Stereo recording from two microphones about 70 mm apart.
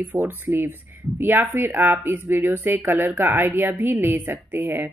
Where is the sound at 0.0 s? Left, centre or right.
Right.